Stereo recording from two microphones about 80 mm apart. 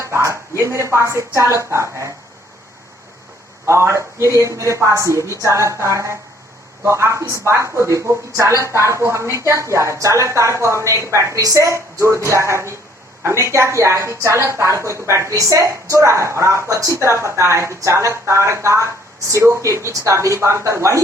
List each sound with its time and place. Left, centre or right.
0.0 s a sound: right
1.4 s a woman's voice: right
3.7 s a woman's voice: right